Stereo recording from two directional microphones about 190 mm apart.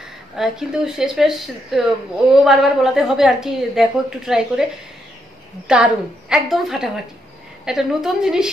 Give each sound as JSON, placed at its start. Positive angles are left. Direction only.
{"t": 0.4, "sound": "a woman's voice", "side_deg": -5}
{"t": 5.7, "sound": "a woman's voice", "side_deg": -5}